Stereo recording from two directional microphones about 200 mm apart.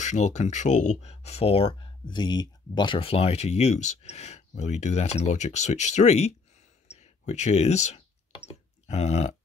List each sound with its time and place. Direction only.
0.0 s speech: 35° left (ahead or behind)
6.9 s clicking: 35° left (ahead or behind)
8.8 s speech: 35° left (ahead or behind)